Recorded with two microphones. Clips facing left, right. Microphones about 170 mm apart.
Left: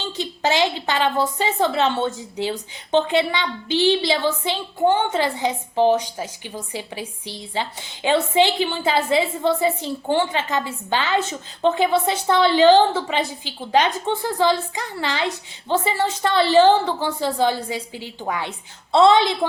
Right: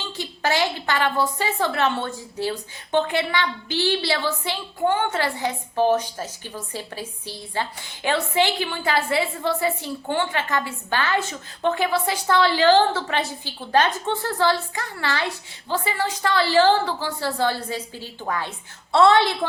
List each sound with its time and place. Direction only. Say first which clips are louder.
0.2 s a woman's voice: left 3 dB; 20° left (ahead or behind)